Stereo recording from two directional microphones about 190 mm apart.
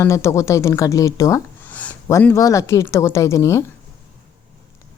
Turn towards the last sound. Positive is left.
turn(degrees=15)  # may be behind; listen again after turning